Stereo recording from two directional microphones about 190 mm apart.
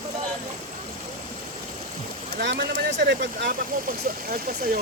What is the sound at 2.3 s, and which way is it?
Speech, 60° right (ahead or behind).